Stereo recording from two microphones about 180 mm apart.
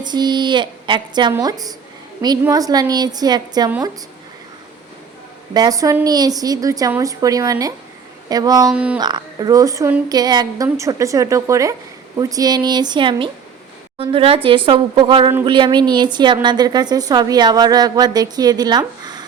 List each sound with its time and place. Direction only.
0.0 s a woman's voice: 25° right (ahead or behind)
5.5 s a woman's voice: 20° right (ahead or behind)
8.7 s a woman's voice: 5° right (ahead or behind)
9.0 s a woman's voice: 25° right (ahead or behind)